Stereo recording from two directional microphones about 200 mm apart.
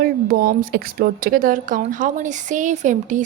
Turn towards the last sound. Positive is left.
turn(degrees=-40)  # may be behind; listen again after turning